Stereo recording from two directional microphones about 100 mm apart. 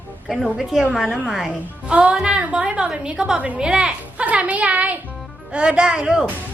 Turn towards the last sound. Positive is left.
turn(degrees=-10)  # may be behind; listen again after turning